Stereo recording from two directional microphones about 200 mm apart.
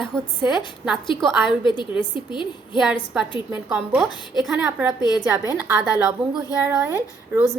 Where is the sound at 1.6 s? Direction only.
20° left (ahead or behind).